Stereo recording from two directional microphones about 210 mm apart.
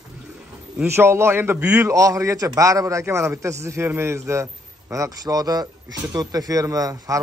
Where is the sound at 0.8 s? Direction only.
10° right (ahead or behind).